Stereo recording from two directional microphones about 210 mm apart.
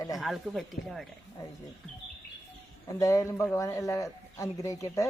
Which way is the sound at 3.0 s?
15° left (ahead or behind).